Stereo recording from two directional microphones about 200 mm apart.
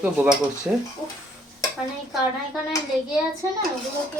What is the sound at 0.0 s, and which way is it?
Speech, 5° right (ahead or behind).